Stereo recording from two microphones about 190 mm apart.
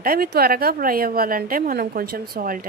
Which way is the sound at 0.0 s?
50° right (ahead or behind).